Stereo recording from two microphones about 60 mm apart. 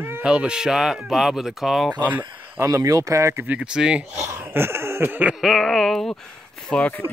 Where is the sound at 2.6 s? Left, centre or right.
Right.